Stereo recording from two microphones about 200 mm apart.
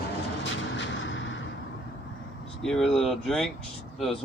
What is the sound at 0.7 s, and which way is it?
Artillery fire, 65° left (ahead or behind).